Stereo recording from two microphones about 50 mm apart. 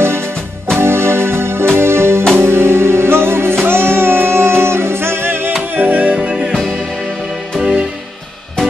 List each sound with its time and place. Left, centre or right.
0.0 s music: right
5.8 s music: right
6.2 s music: centre